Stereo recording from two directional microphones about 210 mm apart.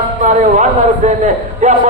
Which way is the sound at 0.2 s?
35° right (ahead or behind).